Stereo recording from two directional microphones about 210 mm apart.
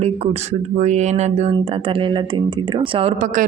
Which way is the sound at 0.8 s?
35° right (ahead or behind).